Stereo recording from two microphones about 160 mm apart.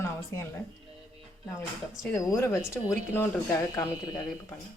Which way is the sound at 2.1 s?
20° left (ahead or behind).